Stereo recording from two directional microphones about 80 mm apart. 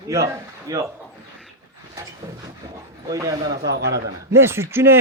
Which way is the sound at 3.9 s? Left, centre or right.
Right.